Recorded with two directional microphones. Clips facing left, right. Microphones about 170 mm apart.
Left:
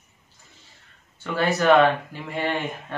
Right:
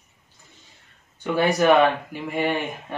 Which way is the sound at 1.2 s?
15° right (ahead or behind).